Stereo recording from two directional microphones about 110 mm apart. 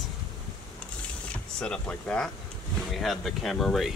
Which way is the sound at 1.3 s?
10° left (ahead or behind).